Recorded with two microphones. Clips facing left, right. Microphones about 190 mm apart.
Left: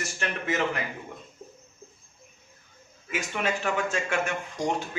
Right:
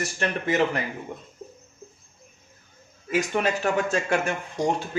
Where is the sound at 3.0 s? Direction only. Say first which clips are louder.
Right 6 dB; 40° right (ahead or behind).